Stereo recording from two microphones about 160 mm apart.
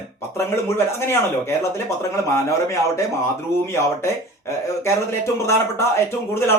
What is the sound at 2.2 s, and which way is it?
Speech, 20° left (ahead or behind).